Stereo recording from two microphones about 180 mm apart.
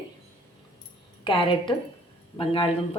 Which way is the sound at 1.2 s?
30° left (ahead or behind).